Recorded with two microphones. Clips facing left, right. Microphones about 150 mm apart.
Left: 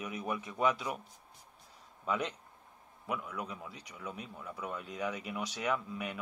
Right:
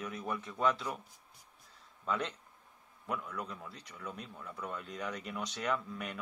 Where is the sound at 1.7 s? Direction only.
10° left (ahead or behind).